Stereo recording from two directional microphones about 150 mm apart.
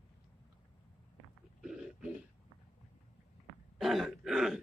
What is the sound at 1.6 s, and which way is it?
Burping, 5° right (ahead or behind).